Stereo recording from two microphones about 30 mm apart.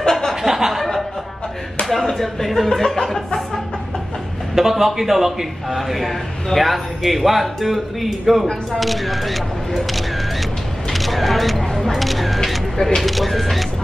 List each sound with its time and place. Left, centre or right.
0.5 s a sound: centre
1.9 s speech: centre
4.6 s a man's voice: centre
10.9 s a sound: centre
11.8 s single-lens reflex camera: centre
12.7 s speech: centre
13.0 s speech: centre